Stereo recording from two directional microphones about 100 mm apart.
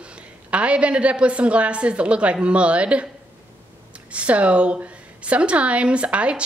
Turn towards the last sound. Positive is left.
turn(degrees=-10)  # may be behind; listen again after turning